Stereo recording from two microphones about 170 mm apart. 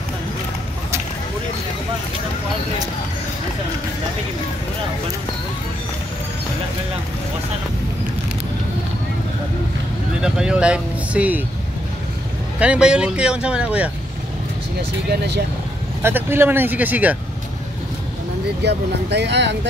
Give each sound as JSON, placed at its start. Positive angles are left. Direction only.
{"t": 10.2, "sound": "speech", "side_deg": -5}
{"t": 12.5, "sound": "speech", "side_deg": -5}
{"t": 14.8, "sound": "speech", "side_deg": -75}
{"t": 16.0, "sound": "speech", "side_deg": -15}
{"t": 18.6, "sound": "speech", "side_deg": -80}